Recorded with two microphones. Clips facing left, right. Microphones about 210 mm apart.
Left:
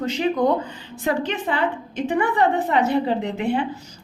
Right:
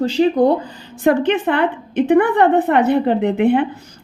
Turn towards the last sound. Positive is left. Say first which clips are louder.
# right 8 dB
turn(degrees=-55)  # may be behind; listen again after turning